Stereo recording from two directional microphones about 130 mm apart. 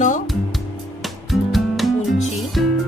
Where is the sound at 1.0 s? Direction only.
Centre (ahead or behind).